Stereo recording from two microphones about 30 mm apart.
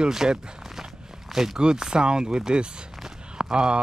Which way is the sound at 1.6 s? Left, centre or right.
Right.